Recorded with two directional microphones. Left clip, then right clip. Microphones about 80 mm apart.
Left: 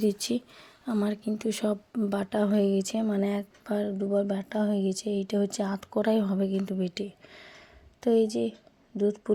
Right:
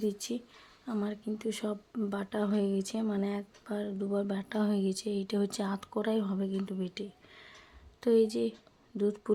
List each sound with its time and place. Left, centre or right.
0.9 s speech: left
2.3 s speech: left
3.2 s speech: left
3.9 s speech: left
4.5 s speech: centre; by 5.9 s left
6.0 s speech: left
6.7 s a sound: left
8.0 s speech: left